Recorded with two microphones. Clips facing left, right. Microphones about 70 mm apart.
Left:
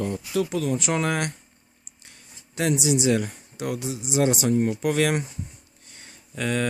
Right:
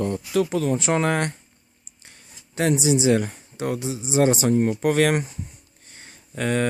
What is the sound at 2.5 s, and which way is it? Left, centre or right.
Speech, right.